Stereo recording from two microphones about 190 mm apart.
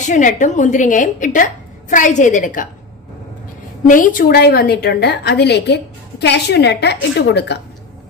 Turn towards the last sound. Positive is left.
turn(degrees=60)  # may be behind; listen again after turning